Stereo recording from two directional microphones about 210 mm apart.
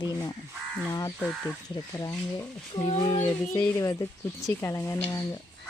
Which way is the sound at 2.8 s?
30° left (ahead or behind).